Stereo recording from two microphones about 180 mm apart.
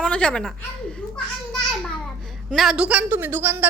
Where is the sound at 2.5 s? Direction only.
Centre (ahead or behind).